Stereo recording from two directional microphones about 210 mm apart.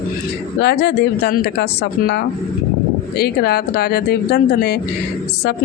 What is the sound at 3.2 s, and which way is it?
A woman's voice, 50° left (ahead or behind).